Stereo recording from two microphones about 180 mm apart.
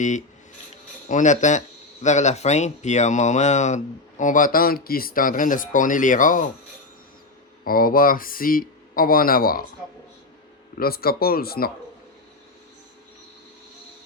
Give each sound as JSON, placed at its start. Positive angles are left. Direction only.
{"t": 0.0, "sound": "speech", "side_deg": 45}
{"t": 7.6, "sound": "speech", "side_deg": 55}
{"t": 10.8, "sound": "speech", "side_deg": 55}